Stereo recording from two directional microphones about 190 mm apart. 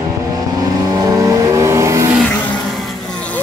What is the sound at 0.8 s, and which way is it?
Vehicle, 20° right (ahead or behind).